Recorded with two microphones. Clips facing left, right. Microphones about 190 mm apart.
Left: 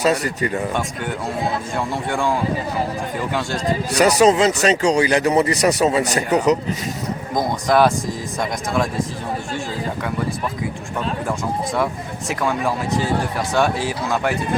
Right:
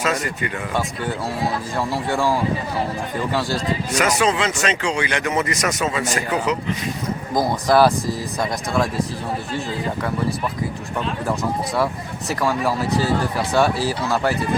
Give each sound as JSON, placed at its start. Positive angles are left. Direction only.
{"t": 0.0, "sound": "speech", "side_deg": 35}
{"t": 2.1, "sound": "speech", "side_deg": -5}
{"t": 3.9, "sound": "speech", "side_deg": 40}
{"t": 7.3, "sound": "speech", "side_deg": -5}
{"t": 11.3, "sound": "speech", "side_deg": 0}